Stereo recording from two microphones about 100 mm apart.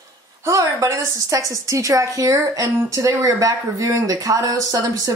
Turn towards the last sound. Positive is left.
turn(degrees=-35)  # may be behind; listen again after turning